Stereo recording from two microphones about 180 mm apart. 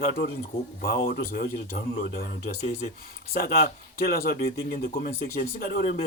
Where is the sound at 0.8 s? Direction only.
55° left (ahead or behind).